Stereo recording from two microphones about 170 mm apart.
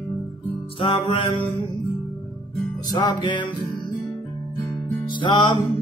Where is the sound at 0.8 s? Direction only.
30° left (ahead or behind).